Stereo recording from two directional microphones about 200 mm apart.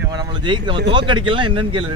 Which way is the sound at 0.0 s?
20° right (ahead or behind).